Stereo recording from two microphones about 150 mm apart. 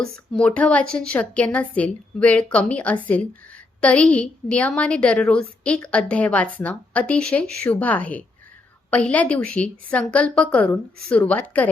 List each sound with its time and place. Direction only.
0.0 s a woman's voice: 5° left (ahead or behind)